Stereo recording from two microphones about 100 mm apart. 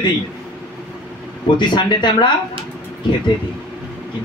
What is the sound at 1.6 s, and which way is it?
Speech, 50° left (ahead or behind).